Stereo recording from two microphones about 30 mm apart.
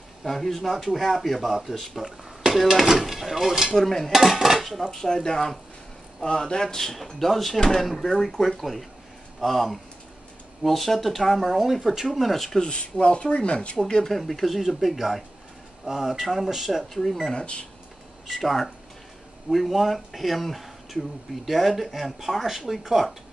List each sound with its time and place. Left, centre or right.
0.2 s speech: centre
3.7 s speech: centre
4.1 s speech: centre
4.9 s speech: centre
6.5 s speech: centre
7.0 s speech: centre
12.6 s speech: left
14.0 s speech: centre
16.9 s speech: centre
18.3 s speech: centre